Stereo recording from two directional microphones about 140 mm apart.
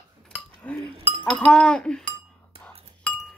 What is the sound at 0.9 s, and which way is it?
Chink, 45° right (ahead or behind).